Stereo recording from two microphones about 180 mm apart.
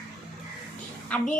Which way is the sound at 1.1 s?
5° left (ahead or behind).